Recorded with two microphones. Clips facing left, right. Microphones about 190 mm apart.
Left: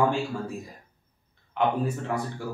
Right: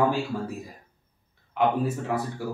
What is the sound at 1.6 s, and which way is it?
Speech, 5° right (ahead or behind).